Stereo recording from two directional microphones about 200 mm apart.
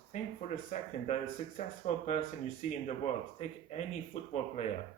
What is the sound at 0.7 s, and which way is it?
Speech, 40° left (ahead or behind).